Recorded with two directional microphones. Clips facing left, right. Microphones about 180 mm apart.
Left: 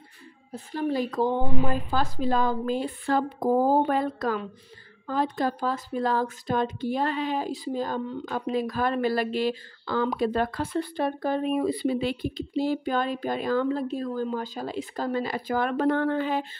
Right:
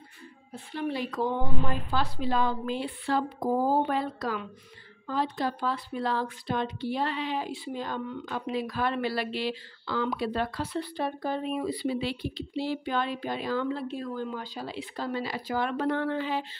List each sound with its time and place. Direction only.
0.5 s a woman's voice: 40° left (ahead or behind)